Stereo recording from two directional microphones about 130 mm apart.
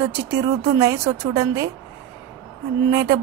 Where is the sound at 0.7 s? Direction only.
25° right (ahead or behind).